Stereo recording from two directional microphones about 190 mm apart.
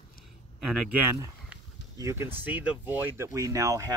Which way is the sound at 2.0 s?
15° right (ahead or behind).